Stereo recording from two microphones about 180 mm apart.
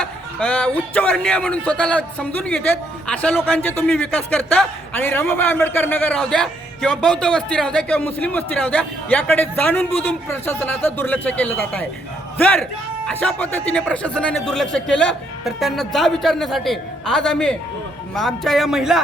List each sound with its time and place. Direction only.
0.0 s a man's voice: 5° left (ahead or behind)